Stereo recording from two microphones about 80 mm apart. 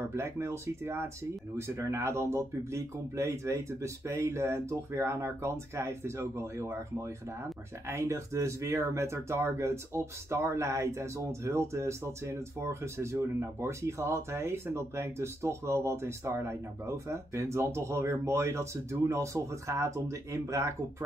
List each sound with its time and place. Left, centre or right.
0.1 s speech: right